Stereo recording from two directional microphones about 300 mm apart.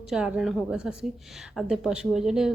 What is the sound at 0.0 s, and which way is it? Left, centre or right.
A woman's voice, centre.